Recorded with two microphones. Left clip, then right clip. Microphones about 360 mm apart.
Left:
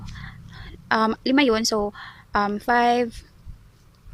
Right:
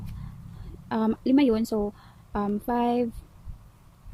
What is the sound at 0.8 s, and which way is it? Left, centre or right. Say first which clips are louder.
Speech: left 6 dB; centre.